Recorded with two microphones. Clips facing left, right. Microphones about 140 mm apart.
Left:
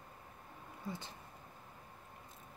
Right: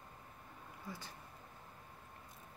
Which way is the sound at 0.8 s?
25° left (ahead or behind).